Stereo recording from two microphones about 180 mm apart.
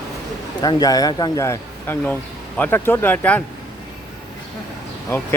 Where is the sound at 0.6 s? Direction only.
20° left (ahead or behind).